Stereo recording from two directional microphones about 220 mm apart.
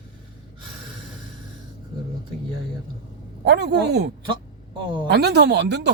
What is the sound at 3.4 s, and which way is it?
Speech, 50° right (ahead or behind).